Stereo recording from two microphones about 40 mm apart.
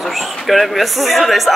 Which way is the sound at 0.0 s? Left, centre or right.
Centre.